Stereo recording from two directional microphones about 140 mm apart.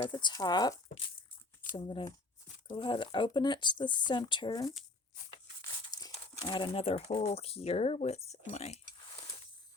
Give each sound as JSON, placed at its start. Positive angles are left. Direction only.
{"t": 0.1, "sound": "speech", "side_deg": 35}
{"t": 5.9, "sound": "speech", "side_deg": 30}